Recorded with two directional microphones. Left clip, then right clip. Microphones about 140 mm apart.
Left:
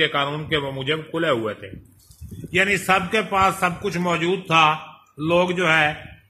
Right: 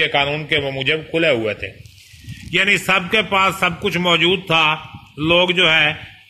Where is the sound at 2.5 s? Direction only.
35° right (ahead or behind).